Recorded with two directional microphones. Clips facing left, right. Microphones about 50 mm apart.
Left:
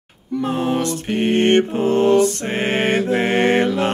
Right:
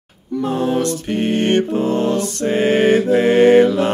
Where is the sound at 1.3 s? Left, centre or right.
Left.